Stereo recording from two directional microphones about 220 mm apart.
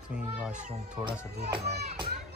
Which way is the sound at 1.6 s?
45° right (ahead or behind).